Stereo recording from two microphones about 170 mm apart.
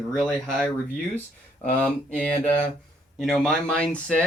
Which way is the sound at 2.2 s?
10° left (ahead or behind).